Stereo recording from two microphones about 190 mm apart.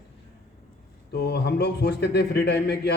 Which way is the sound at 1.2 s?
60° left (ahead or behind).